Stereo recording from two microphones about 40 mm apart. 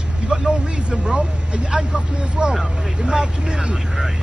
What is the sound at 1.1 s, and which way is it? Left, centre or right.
Speech, right.